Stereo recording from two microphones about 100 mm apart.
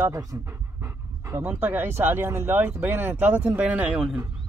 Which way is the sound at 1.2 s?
30° right (ahead or behind).